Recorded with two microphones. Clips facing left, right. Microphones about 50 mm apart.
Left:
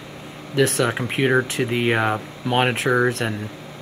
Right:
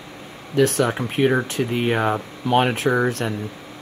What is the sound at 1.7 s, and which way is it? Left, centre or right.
Speech, left.